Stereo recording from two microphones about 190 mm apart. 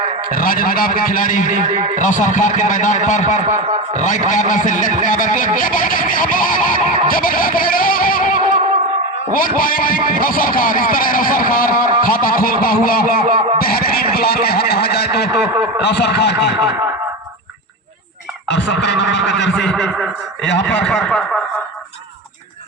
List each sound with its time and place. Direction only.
0.3 s a man's voice: 45° left (ahead or behind)
13.6 s a sound: 50° left (ahead or behind)
15.8 s speech: 65° left (ahead or behind)
18.4 s speech: 70° left (ahead or behind)
19.6 s speech: centre (ahead or behind)
20.4 s speech: 70° left (ahead or behind)
20.8 s speech: 5° left (ahead or behind)